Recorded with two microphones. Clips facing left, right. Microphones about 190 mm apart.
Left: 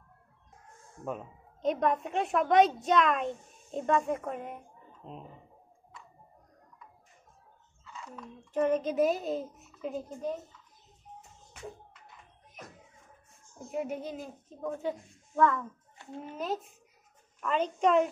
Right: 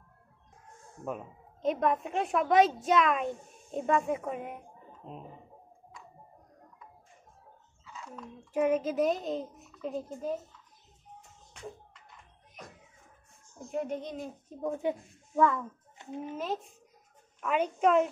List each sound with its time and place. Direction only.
1.0 s a child's voice: centre (ahead or behind)
7.8 s a child's voice: centre (ahead or behind)
13.7 s a child's voice: 5° left (ahead or behind)
14.6 s a woman's voice: 15° right (ahead or behind)
16.3 s a child's voice: centre (ahead or behind)